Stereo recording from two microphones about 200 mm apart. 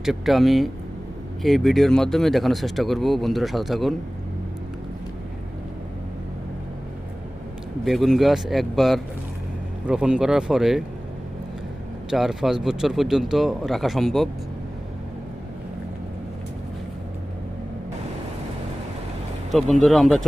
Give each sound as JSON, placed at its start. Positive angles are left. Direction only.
{"t": 0.0, "sound": "speech", "side_deg": 0}
{"t": 7.9, "sound": "speech", "side_deg": 0}
{"t": 12.1, "sound": "speech", "side_deg": 0}
{"t": 19.5, "sound": "speech", "side_deg": 0}